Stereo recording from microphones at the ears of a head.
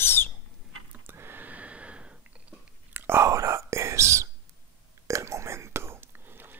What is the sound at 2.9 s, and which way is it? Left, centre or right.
Whispering, right.